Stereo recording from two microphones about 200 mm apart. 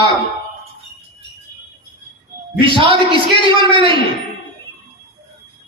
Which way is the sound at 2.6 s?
25° right (ahead or behind).